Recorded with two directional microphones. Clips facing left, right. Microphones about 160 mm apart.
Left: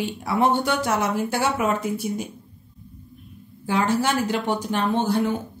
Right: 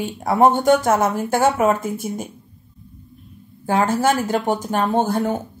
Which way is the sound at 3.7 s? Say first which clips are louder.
Right 4 dB; 50° right (ahead or behind).